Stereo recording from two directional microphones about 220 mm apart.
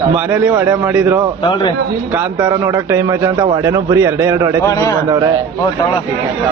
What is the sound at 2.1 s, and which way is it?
A man's voice, 15° right (ahead or behind).